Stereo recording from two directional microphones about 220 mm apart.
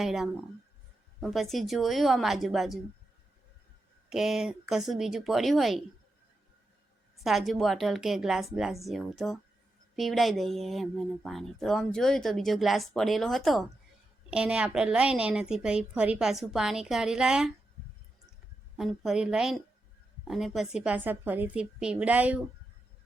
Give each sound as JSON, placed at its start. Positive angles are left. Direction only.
{"t": 0.0, "sound": "speech", "side_deg": 0}
{"t": 4.1, "sound": "speech", "side_deg": 0}
{"t": 7.2, "sound": "speech", "side_deg": 0}
{"t": 18.8, "sound": "speech", "side_deg": 0}